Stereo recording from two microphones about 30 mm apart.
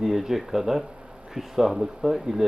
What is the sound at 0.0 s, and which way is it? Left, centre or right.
Speech, centre.